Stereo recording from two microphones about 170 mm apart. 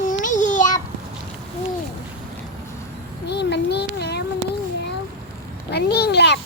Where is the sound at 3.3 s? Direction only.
80° left.